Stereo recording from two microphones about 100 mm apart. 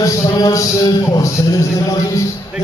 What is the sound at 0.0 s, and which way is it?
A man's voice, 35° left (ahead or behind).